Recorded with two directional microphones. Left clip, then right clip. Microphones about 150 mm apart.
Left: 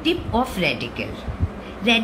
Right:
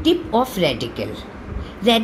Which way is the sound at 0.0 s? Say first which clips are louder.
Right 4 dB; 35° right (ahead or behind).